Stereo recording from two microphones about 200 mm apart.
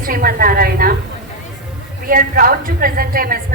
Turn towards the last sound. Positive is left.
turn(degrees=-45)  # may be behind; listen again after turning